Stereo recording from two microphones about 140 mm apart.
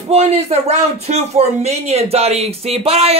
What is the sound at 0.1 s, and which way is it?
A man's voice, 50° right (ahead or behind).